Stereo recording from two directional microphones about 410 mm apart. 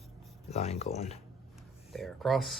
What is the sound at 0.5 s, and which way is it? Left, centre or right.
Speech, centre.